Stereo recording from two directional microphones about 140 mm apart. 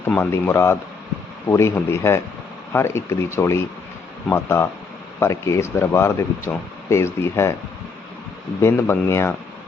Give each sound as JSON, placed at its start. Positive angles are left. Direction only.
{"t": 0.2, "sound": "speech", "side_deg": 20}
{"t": 8.6, "sound": "speech", "side_deg": 20}